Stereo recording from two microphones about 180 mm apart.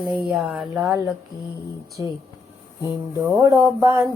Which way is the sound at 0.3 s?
Centre (ahead or behind).